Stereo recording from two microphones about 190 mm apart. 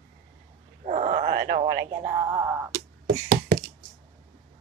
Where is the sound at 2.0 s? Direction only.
20° right (ahead or behind).